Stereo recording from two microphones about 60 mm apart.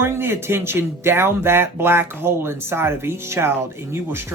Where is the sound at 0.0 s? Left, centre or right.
Right.